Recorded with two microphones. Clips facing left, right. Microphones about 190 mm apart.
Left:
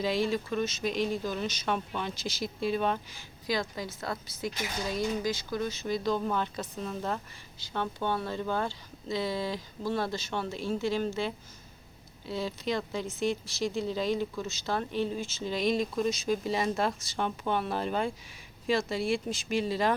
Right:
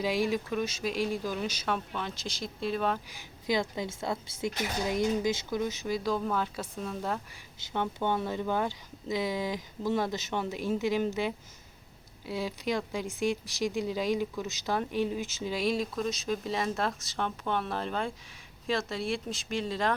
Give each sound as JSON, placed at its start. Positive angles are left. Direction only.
{"t": 0.0, "sound": "speech", "side_deg": -10}
{"t": 3.2, "sound": "speech", "side_deg": -20}
{"t": 5.8, "sound": "speech", "side_deg": -5}
{"t": 7.7, "sound": "speech", "side_deg": -15}